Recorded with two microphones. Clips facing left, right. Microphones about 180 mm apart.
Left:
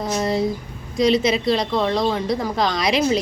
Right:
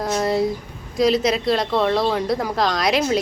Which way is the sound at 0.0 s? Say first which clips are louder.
Right 1 dB; centre (ahead or behind).